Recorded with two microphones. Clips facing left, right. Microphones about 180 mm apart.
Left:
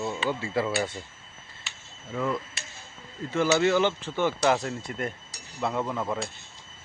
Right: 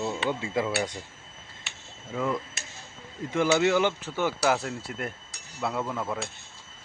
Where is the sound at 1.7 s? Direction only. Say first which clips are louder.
Even; 60° right (ahead or behind).